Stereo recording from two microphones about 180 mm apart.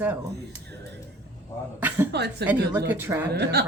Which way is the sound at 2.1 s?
70° right (ahead or behind).